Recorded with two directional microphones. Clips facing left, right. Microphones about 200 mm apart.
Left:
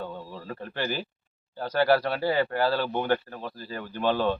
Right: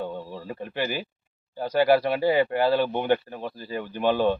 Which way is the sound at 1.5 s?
15° right (ahead or behind).